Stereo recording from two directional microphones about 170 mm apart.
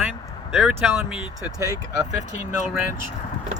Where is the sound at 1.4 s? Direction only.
20° right (ahead or behind).